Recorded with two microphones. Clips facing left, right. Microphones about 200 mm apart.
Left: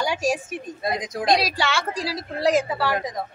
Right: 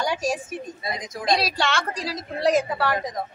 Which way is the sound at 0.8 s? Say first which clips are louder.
Left 4 dB; 60° left (ahead or behind).